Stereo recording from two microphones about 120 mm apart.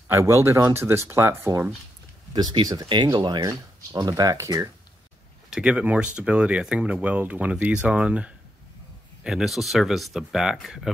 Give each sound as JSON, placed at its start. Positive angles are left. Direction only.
{"t": 0.1, "sound": "speech", "side_deg": -25}
{"t": 2.3, "sound": "speech", "side_deg": -40}
{"t": 3.4, "sound": "speech", "side_deg": -30}
{"t": 5.5, "sound": "speech", "side_deg": -10}